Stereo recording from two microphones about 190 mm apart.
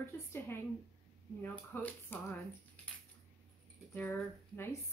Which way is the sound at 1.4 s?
10° left (ahead or behind).